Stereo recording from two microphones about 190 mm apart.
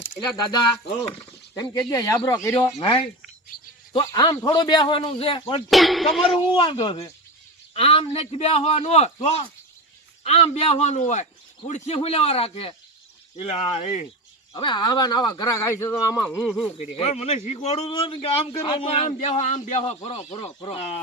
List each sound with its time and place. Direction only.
1.2 s a sound: 15° left (ahead or behind)
1.8 s speech: 15° left (ahead or behind)
2.7 s speech: 25° left (ahead or behind)
5.7 s speech: centre (ahead or behind)
6.5 s speech: 25° left (ahead or behind)
16.4 s speech: centre (ahead or behind)
16.7 s speech: 35° left (ahead or behind)